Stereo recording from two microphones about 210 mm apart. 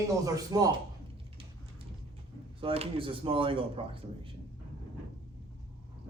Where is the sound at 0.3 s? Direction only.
15° right (ahead or behind).